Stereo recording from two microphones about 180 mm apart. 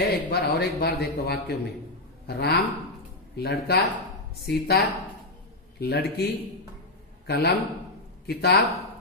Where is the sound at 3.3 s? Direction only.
65° left (ahead or behind).